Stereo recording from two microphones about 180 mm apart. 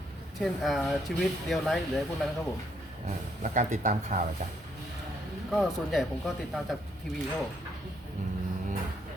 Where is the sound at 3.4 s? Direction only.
45° right (ahead or behind).